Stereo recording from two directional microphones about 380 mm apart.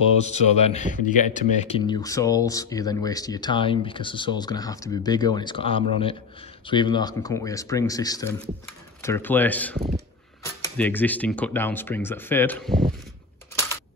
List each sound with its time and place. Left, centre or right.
0.2 s speech: centre
9.8 s speech: right
10.4 s speech: centre